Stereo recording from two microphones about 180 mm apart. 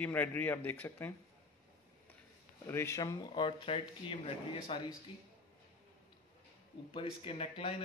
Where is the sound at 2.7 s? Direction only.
15° left (ahead or behind); by 4.9 s 30° left (ahead or behind).